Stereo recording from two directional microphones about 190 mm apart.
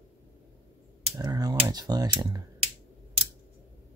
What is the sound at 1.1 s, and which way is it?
Typing, 20° right (ahead or behind).